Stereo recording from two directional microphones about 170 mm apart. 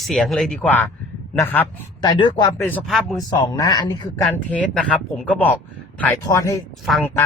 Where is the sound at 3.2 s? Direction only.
20° left (ahead or behind).